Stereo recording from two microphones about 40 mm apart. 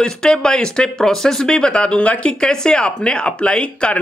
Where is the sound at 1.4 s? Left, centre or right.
Left.